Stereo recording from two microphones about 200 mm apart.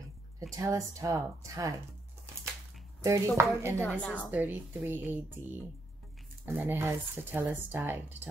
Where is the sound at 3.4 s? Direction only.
15° right (ahead or behind).